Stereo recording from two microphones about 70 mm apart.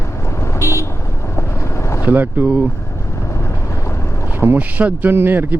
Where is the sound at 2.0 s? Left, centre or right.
Right.